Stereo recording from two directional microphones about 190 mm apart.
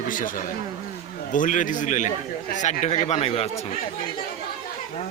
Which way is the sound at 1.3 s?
45° left (ahead or behind).